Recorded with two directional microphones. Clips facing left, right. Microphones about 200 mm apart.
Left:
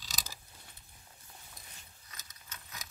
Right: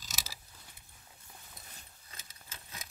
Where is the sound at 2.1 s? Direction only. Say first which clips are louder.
Even; 30° right (ahead or behind).